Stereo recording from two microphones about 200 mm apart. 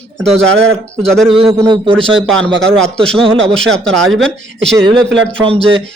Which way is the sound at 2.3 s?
5° left (ahead or behind).